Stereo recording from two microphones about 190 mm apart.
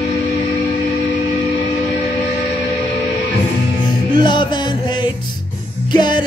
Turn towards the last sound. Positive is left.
turn(degrees=25)  # may be behind; listen again after turning